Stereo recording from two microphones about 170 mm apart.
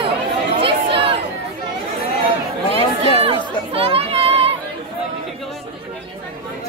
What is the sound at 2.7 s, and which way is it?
Chatter, 35° left (ahead or behind).